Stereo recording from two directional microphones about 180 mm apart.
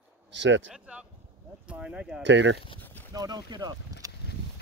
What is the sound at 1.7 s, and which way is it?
Speech, 5° right (ahead or behind).